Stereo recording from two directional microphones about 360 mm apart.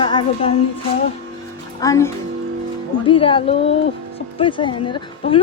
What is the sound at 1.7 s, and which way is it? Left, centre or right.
Speech, centre.